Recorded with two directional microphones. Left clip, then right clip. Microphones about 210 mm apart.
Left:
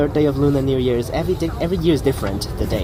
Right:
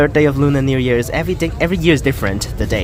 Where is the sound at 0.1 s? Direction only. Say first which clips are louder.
Right 4 dB; 65° right (ahead or behind).